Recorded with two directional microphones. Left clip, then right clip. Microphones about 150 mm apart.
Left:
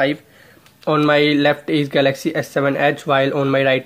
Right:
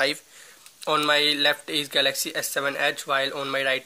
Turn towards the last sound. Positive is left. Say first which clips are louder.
# left 9 dB
turn(degrees=-10)  # may be behind; listen again after turning